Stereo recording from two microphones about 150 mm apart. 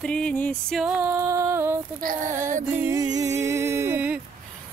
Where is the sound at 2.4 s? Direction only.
55° right (ahead or behind).